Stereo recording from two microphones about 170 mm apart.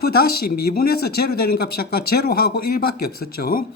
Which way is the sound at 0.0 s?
65° left (ahead or behind).